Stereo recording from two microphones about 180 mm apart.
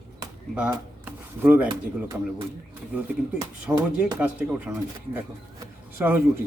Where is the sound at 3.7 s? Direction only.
10° right (ahead or behind).